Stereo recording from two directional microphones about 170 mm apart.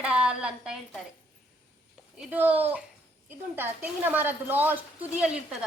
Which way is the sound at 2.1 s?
10° right (ahead or behind).